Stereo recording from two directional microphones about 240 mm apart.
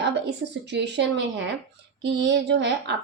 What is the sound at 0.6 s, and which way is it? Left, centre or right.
Speech, right.